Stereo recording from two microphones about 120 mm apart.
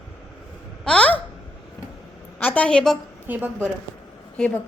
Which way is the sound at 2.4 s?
10° left (ahead or behind).